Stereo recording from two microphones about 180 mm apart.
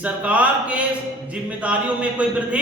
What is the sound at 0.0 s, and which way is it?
Speech, 10° right (ahead or behind).